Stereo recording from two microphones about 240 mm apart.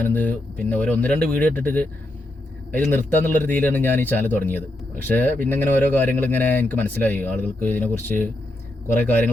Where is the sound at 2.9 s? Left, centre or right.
Centre.